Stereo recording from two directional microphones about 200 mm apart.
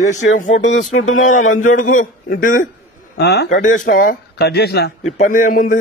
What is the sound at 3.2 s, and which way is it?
Speech, 55° left (ahead or behind).